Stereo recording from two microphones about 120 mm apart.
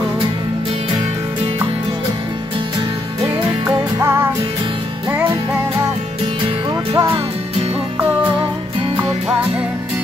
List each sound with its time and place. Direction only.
3.6 s music: 20° right (ahead or behind)
6.7 s music: 35° right (ahead or behind)